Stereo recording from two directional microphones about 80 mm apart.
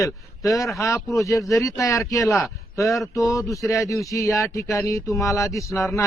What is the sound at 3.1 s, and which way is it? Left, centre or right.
Speech, left.